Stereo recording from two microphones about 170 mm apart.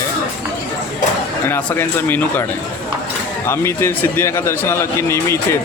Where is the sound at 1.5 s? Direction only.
10° left (ahead or behind).